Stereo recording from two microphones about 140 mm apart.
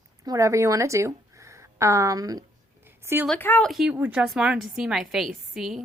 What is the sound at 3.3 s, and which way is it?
Speech, 15° left (ahead or behind).